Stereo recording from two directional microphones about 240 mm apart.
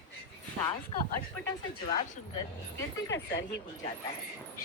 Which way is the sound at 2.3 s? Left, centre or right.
Centre.